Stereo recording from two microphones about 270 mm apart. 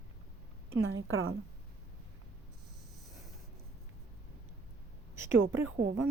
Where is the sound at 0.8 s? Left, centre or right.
Right.